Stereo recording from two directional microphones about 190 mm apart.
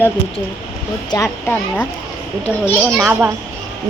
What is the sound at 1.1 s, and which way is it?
Speech, 15° left (ahead or behind).